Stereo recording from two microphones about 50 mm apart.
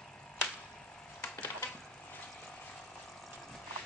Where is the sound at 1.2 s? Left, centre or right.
Left.